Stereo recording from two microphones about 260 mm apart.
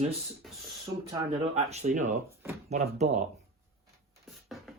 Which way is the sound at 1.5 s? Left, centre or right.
Right.